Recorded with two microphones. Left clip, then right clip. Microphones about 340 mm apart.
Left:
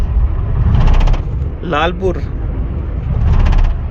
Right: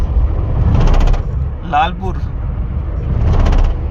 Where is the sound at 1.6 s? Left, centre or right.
Centre.